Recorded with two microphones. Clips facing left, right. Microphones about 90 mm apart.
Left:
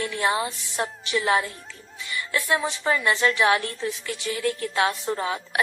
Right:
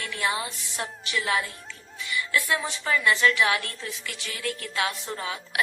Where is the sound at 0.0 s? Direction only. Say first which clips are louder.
Left 4 dB; 35° left (ahead or behind).